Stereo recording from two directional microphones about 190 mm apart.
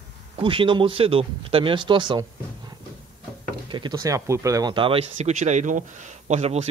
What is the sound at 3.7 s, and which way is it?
Speech, 25° right (ahead or behind).